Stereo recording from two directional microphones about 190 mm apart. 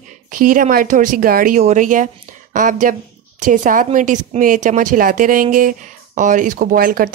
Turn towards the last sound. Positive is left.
turn(degrees=-50)  # may be behind; listen again after turning